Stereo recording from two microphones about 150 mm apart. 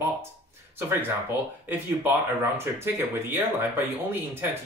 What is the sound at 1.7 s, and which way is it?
Speech, 15° right (ahead or behind).